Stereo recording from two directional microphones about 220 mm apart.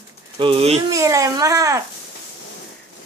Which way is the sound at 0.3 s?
25° right (ahead or behind).